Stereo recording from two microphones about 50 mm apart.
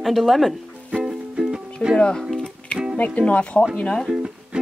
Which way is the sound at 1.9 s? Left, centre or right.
Centre.